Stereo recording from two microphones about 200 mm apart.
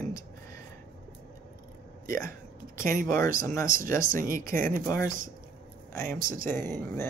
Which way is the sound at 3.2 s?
15° left (ahead or behind).